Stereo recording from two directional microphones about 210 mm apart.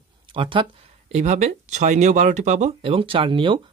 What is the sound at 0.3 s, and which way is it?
Speech, 25° right (ahead or behind).